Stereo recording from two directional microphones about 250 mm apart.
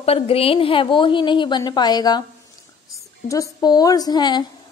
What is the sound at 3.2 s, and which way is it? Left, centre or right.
A woman's voice, centre.